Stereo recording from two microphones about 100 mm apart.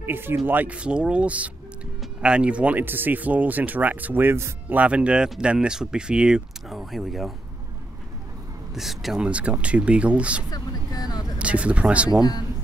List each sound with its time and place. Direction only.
0.0 s speech: 20° right (ahead or behind); by 7.3 s centre (ahead or behind)
8.7 s speech: 5° right (ahead or behind)
10.5 s vehicle: 40° left (ahead or behind)
11.3 s speech: 10° right (ahead or behind)
12.1 s speech: 40° left (ahead or behind)